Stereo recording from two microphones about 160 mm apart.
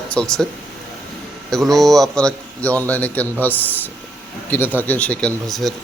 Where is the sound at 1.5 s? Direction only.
Centre (ahead or behind).